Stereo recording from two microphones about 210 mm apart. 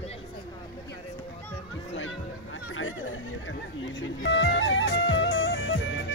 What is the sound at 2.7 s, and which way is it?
Music, 70° left (ahead or behind).